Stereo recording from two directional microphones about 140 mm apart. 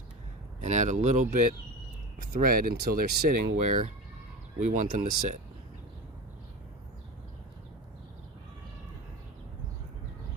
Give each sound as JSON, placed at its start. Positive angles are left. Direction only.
{"t": 0.6, "sound": "speech", "side_deg": -60}
{"t": 2.3, "sound": "speech", "side_deg": -90}
{"t": 4.6, "sound": "speech", "side_deg": -65}